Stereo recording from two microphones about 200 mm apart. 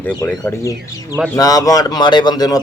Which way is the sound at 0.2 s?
10° left (ahead or behind).